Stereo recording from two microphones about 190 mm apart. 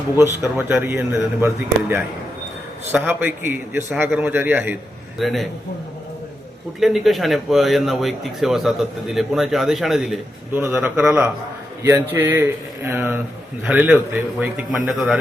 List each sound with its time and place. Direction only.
0.2 s speech: 10° right (ahead or behind)
6.7 s speech: centre (ahead or behind)